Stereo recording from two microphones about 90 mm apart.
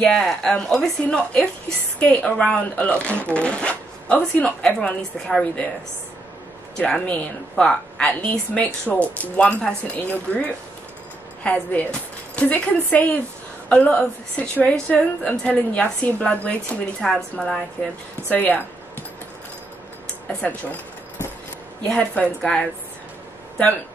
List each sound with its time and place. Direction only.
0.0 s a woman's voice: 5° left (ahead or behind)
6.9 s a woman's voice: 10° left (ahead or behind)
18.3 s a sound: 20° left (ahead or behind)
20.2 s a woman's voice: 15° left (ahead or behind)